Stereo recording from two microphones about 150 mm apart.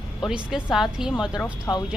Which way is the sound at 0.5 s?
5° right (ahead or behind).